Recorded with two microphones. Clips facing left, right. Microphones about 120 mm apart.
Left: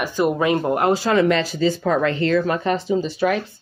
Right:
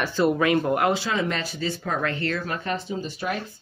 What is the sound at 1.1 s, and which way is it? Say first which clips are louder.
Speech: left 9 dB; 80° left.